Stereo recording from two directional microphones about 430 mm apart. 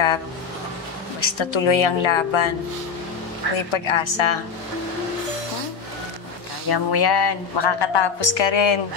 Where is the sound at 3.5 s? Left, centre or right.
Left.